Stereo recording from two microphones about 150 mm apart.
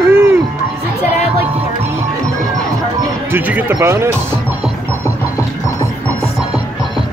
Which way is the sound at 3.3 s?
15° right (ahead or behind).